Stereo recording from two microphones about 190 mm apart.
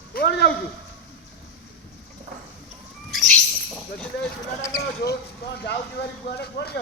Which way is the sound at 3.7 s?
5° left (ahead or behind).